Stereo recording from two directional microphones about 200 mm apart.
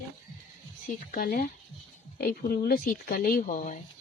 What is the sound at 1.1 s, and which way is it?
Speech, 45° left (ahead or behind).